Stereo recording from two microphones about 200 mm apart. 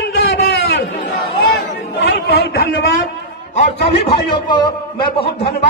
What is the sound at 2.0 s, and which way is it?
Chatter, 55° left (ahead or behind).